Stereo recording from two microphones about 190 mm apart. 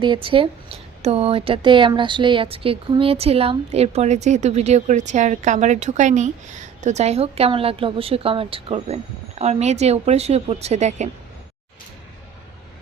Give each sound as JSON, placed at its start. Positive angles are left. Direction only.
{"t": 0.0, "sound": "a woman's voice", "side_deg": -25}